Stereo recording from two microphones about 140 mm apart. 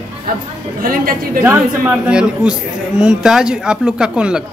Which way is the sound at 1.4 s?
10° right (ahead or behind).